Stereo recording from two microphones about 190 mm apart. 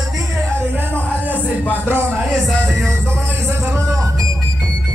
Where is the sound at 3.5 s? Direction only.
15° right (ahead or behind).